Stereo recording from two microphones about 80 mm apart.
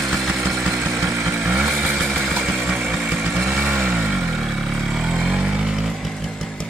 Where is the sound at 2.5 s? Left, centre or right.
Right.